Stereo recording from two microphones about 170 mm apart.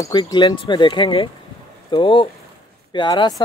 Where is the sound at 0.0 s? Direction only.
25° left (ahead or behind).